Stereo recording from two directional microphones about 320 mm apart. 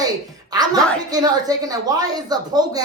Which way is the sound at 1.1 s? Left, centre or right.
Centre.